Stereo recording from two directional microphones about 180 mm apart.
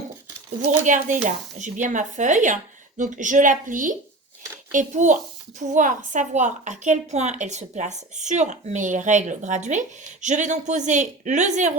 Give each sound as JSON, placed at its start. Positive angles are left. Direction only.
{"t": 0.9, "sound": "a woman's voice", "side_deg": -45}